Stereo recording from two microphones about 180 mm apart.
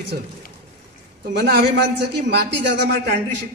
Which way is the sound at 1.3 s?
65° right (ahead or behind).